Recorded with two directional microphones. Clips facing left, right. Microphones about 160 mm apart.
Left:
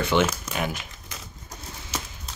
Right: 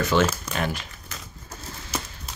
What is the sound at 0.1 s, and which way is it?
Speech, 20° left (ahead or behind).